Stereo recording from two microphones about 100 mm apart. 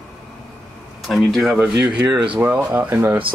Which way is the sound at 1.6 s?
10° right (ahead or behind).